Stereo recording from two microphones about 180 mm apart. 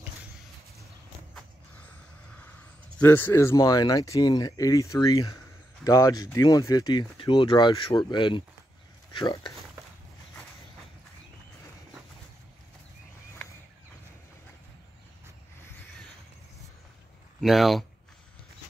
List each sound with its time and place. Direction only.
3.0 s speech: 10° left (ahead or behind)
17.4 s speech: centre (ahead or behind)